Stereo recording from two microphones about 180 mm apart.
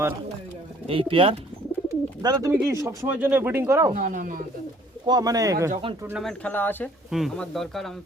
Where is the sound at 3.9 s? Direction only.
45° right (ahead or behind).